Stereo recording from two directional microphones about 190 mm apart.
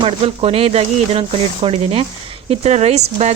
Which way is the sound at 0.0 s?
30° right (ahead or behind).